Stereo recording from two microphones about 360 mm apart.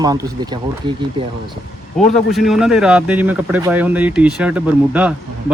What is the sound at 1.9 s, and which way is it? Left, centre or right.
Speech, centre.